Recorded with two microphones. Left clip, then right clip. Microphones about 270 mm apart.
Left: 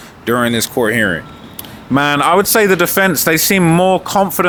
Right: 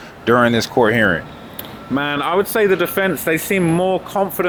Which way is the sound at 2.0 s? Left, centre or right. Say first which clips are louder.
Left 6 dB; left.